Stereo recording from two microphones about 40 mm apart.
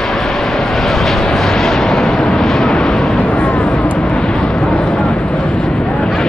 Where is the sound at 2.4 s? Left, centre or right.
Centre.